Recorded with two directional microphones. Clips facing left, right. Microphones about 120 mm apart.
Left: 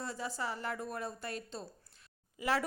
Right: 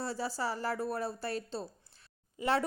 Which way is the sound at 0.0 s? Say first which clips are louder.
Right 4 dB; 35° right (ahead or behind).